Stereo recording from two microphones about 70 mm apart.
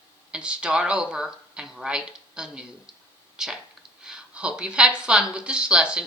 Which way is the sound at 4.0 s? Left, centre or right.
Centre.